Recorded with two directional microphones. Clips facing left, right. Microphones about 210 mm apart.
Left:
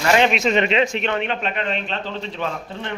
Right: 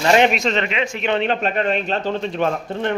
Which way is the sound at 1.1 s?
35° right (ahead or behind).